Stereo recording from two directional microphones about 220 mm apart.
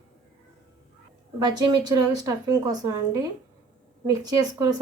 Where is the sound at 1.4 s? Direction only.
20° right (ahead or behind).